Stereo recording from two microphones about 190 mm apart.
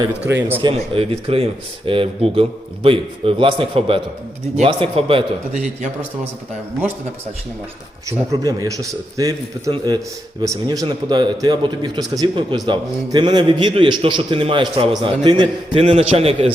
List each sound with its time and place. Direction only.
0.3 s a man's voice: 10° right (ahead or behind)
0.6 s a man's voice: 30° right (ahead or behind)
8.3 s a man's voice: 20° right (ahead or behind)